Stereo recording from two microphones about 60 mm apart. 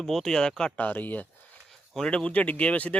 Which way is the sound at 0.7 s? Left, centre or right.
Left.